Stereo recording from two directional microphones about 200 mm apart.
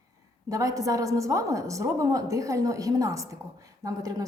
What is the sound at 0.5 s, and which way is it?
A woman's voice, 15° right (ahead or behind).